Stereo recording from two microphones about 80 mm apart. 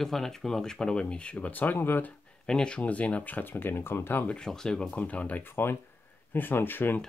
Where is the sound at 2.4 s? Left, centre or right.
Centre; by 4.3 s left.